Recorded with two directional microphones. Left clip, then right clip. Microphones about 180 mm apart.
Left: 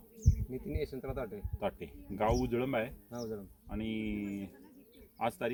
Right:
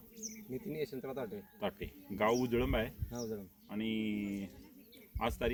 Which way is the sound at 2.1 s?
20° left (ahead or behind).